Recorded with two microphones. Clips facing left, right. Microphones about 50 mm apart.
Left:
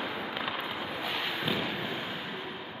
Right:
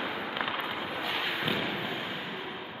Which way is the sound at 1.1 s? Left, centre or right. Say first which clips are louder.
Right 1 dB; centre.